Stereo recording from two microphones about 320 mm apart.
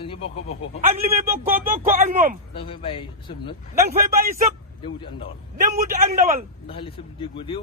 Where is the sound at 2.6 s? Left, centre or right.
Centre.